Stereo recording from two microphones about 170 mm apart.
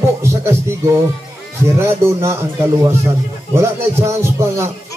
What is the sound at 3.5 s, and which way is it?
A man's voice, 15° right (ahead or behind).